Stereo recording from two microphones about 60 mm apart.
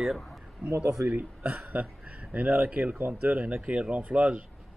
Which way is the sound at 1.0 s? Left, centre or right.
Right.